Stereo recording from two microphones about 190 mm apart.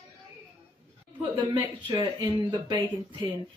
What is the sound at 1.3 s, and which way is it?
Speech, 20° right (ahead or behind).